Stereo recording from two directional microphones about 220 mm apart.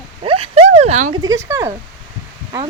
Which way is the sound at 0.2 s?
25° right (ahead or behind).